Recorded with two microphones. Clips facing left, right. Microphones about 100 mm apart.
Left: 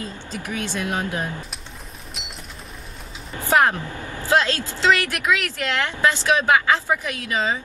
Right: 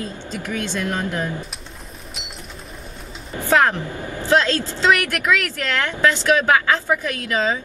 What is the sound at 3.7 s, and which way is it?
Speech, 25° right (ahead or behind).